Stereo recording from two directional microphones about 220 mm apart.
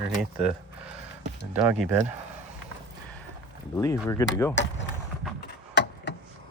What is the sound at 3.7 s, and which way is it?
Speech, 15° left (ahead or behind).